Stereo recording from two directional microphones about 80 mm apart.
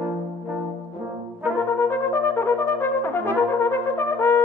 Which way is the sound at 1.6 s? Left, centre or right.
Left.